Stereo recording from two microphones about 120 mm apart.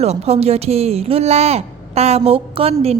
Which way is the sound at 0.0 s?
60° right (ahead or behind).